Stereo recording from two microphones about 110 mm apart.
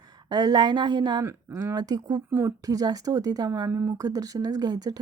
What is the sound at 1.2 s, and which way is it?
Speech, 25° right (ahead or behind).